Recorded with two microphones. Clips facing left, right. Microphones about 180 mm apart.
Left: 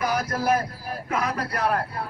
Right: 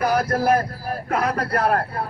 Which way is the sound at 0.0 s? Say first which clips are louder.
Right 5 dB; 60° right (ahead or behind).